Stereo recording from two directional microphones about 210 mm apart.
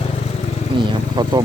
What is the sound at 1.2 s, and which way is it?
Speech, 20° right (ahead or behind).